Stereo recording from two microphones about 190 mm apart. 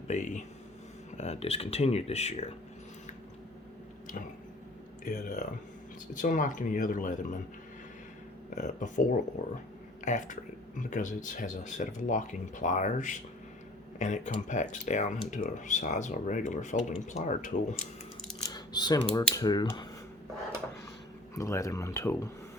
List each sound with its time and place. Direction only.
0.1 s speech: 40° left (ahead or behind)
5.0 s speech: 40° left (ahead or behind)
8.5 s speech: 40° left (ahead or behind)
18.4 s typing: 20° left (ahead or behind)
19.3 s speech: 20° left (ahead or behind)
21.3 s speech: 15° left (ahead or behind)